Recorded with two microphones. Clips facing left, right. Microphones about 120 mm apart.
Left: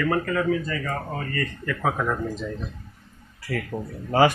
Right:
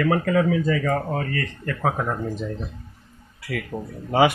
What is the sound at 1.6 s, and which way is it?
Speech, 40° right (ahead or behind).